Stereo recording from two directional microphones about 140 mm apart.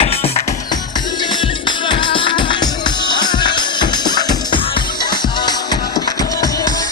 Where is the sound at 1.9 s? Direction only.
35° left (ahead or behind).